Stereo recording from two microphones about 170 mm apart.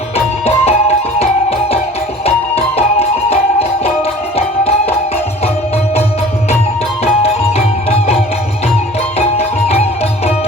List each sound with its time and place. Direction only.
0.4 s music: 40° left (ahead or behind)
9.1 s music: 40° left (ahead or behind)